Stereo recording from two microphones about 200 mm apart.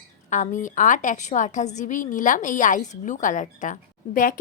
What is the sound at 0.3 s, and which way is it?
A woman's voice, 35° left (ahead or behind).